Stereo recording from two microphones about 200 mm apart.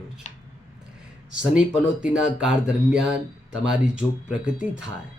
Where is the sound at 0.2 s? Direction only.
35° left (ahead or behind).